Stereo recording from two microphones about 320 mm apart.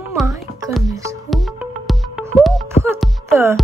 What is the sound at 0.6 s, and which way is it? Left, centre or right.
Music, centre.